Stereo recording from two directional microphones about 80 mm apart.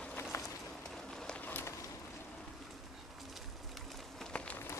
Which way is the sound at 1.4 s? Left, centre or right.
Left.